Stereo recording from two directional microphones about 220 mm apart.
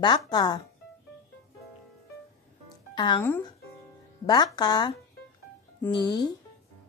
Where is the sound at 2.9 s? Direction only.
20° left (ahead or behind).